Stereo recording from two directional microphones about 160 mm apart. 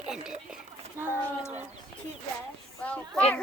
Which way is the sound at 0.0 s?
5° right (ahead or behind).